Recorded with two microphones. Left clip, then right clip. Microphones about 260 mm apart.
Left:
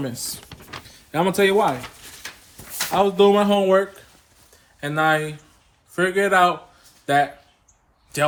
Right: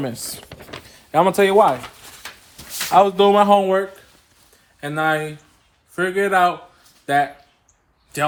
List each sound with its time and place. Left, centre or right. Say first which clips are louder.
0.0 s speech: right 2 dB; right
2.9 s speech: right 3 dB; right
3.6 s a man's voice: left 1 dB; centre
4.5 s a sound: left 1 dB; centre
5.9 s a man's voice: even; centre